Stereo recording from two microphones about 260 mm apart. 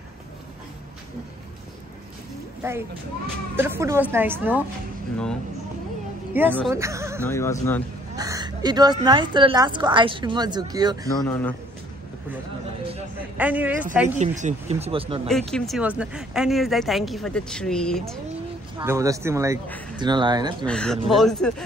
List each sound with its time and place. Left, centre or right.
2.6 s a woman's voice: centre
6.3 s speech: centre
7.2 s speech: centre
8.2 s a sound: centre
9.0 s a woman's voice: centre
11.1 s speech: centre
13.4 s speech: centre
14.1 s speech: right
15.2 s speech: centre
18.8 s a woman's voice: centre
20.6 s speech: centre